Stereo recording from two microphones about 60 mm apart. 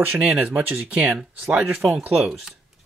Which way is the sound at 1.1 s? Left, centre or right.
Centre.